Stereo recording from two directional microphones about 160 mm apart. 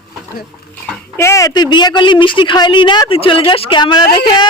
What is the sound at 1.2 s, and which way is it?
A woman's voice, 20° left (ahead or behind).